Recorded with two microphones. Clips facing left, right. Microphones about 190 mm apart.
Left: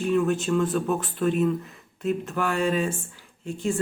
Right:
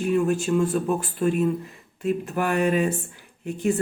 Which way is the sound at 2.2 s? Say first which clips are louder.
Right 4 dB; 15° right (ahead or behind).